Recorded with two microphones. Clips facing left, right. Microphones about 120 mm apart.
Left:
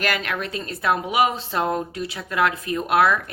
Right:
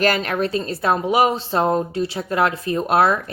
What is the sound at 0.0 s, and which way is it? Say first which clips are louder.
Speech: right 6 dB; 35° right (ahead or behind).